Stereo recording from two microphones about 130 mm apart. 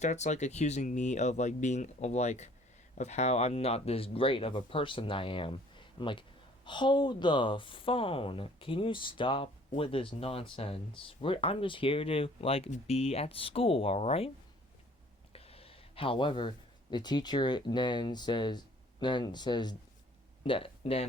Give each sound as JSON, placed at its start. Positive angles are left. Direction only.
{"t": 0.0, "sound": "speech", "side_deg": 65}
{"t": 15.3, "sound": "speech", "side_deg": 50}
{"t": 20.4, "sound": "speech", "side_deg": 45}